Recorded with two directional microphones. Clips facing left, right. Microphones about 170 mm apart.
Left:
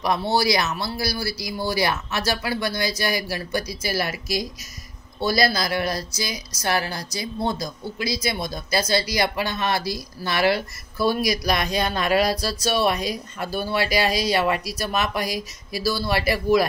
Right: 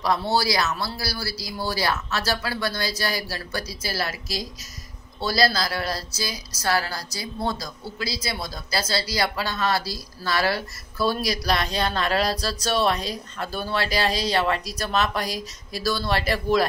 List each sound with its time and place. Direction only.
0.0 s a woman's voice: 15° left (ahead or behind)